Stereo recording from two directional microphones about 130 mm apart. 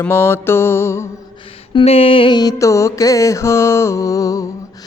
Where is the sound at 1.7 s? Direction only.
45° left (ahead or behind); by 4.4 s 25° left (ahead or behind).